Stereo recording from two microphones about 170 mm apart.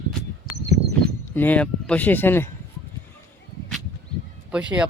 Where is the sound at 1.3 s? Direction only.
10° left (ahead or behind).